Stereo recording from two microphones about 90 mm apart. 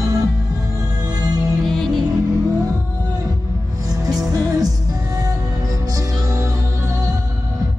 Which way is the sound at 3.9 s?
45° right (ahead or behind).